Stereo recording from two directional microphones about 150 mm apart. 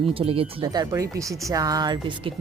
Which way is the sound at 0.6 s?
25° right (ahead or behind).